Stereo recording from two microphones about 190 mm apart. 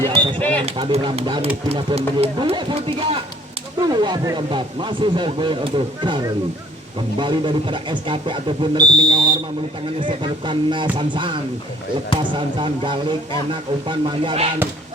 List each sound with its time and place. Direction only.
0.3 s speech: 10° left (ahead or behind)
0.6 s speech: 30° right (ahead or behind)